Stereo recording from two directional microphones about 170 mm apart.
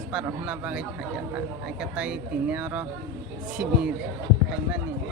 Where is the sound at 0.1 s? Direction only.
5° right (ahead or behind).